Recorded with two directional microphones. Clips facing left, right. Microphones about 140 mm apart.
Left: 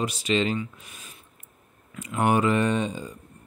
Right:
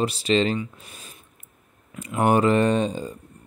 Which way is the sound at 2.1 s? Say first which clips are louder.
Right 3 dB; 35° right (ahead or behind).